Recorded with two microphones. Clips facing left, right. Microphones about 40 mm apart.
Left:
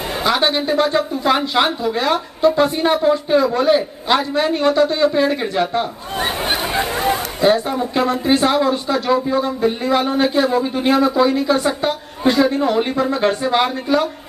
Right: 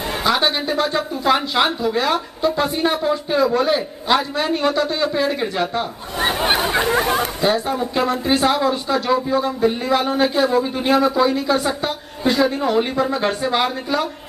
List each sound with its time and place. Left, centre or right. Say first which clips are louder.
0.2 s speech: left 2 dB; centre
6.2 s chatter: right 3 dB; centre
7.4 s speech: left 6 dB; centre